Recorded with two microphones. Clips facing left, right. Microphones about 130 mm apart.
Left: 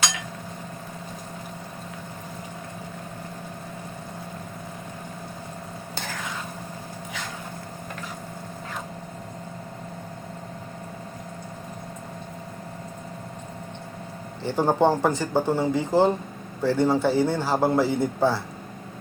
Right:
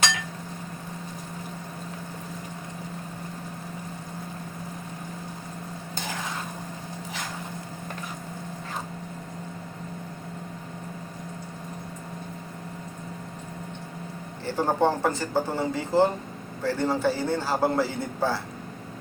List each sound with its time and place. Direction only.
14.4 s a man's voice: 15° left (ahead or behind)